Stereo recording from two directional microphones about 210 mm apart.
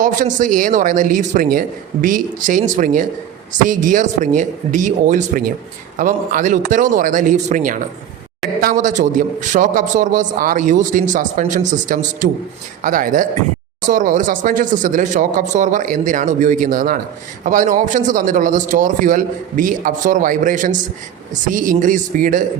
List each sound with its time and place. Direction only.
0.0 s a man's voice: 35° right (ahead or behind)